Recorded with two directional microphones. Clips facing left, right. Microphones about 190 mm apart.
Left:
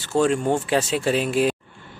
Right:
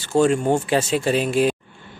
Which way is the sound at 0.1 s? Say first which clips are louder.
Right 2 dB; centre (ahead or behind).